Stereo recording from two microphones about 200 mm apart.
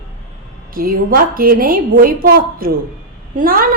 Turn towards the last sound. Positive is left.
turn(degrees=-45)  # may be behind; listen again after turning